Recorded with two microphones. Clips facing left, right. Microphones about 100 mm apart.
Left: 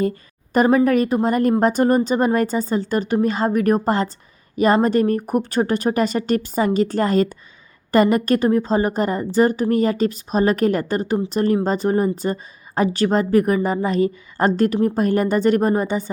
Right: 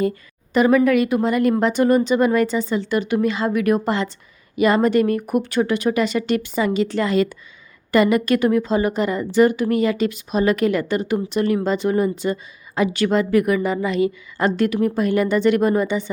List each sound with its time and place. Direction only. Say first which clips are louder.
0.5 s a woman's voice: even; 40° left (ahead or behind)